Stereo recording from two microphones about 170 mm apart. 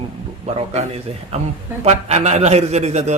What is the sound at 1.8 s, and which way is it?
A man's voice, 40° right (ahead or behind).